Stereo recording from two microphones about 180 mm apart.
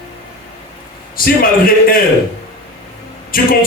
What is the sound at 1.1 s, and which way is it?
Speech, 55° left (ahead or behind).